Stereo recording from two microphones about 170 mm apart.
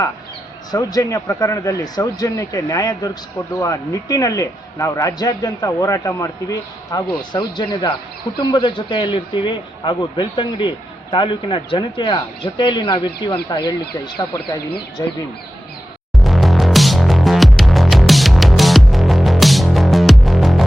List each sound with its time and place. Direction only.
0.7 s a man's voice: 20° left (ahead or behind)
16.1 s music: centre (ahead or behind)